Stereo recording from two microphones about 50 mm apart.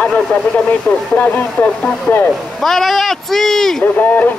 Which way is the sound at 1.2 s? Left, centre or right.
Left.